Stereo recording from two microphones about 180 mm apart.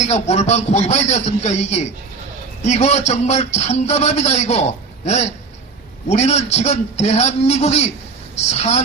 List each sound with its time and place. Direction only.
0.0 s speech: 40° left (ahead or behind)